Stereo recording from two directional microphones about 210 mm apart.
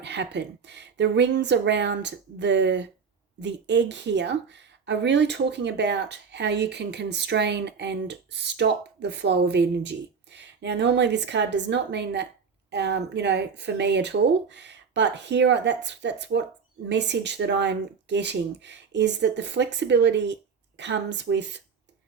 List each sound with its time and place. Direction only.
0.0 s speech: 55° right (ahead or behind)